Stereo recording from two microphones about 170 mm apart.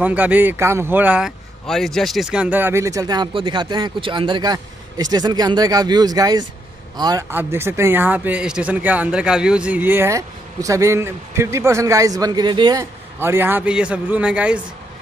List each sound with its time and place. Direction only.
0.0 s speech: 10° right (ahead or behind)
1.7 s speech: centre (ahead or behind); by 12.8 s 25° right (ahead or behind)
13.2 s speech: 15° right (ahead or behind)